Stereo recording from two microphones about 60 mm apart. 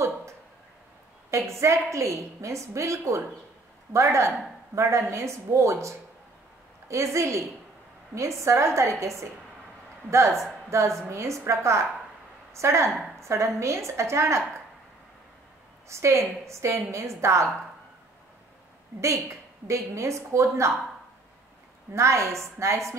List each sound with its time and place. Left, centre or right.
1.3 s a woman's voice: right
10.7 s a woman's voice: right
15.9 s a woman's voice: right
19.2 s a woman's voice: right
21.9 s a woman's voice: right